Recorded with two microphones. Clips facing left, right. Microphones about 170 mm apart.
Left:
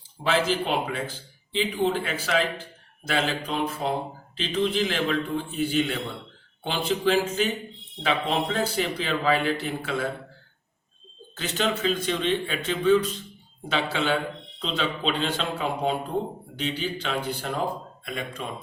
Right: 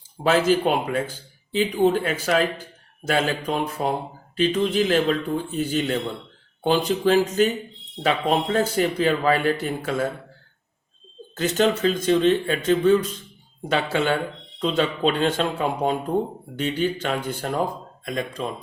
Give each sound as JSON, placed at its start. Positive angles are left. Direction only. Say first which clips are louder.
{"t": 0.2, "sound": "speech", "louder": "right 5 dB", "side_deg": -45}
{"t": 11.3, "sound": "speech", "louder": "right 7 dB", "side_deg": -45}